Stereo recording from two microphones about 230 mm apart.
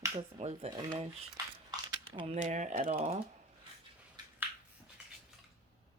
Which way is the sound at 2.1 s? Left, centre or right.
Right.